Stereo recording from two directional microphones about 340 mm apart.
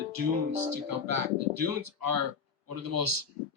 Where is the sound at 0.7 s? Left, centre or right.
Right.